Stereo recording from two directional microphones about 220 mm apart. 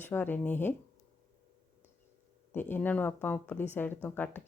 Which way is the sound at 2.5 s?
10° left (ahead or behind).